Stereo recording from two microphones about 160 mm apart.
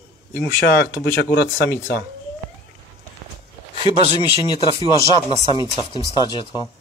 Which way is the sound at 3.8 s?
30° left (ahead or behind).